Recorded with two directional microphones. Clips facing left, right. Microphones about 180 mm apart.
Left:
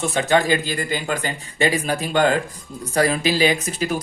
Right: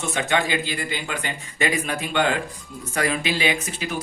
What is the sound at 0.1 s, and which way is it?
Speech, 35° left (ahead or behind).